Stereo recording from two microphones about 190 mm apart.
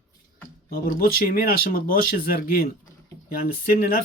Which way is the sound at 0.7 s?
50° left (ahead or behind).